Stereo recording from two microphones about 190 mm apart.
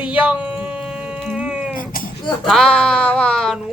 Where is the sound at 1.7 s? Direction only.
50° left (ahead or behind).